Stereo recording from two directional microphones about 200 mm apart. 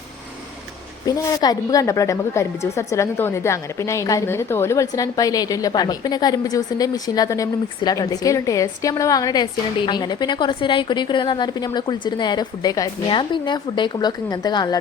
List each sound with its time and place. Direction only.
1.0 s a woman's voice: 20° left (ahead or behind)